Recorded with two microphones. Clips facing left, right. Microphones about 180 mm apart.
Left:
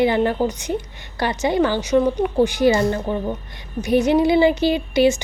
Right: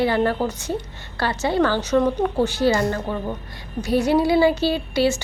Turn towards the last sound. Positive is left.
turn(degrees=15)  # may be behind; listen again after turning